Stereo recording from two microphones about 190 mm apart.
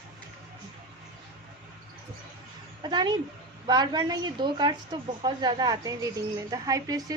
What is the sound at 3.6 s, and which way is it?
A woman's voice, 20° right (ahead or behind).